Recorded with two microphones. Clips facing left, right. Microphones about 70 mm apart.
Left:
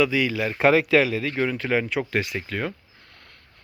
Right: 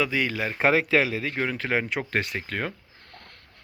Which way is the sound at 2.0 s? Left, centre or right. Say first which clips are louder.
Left 2 dB; right.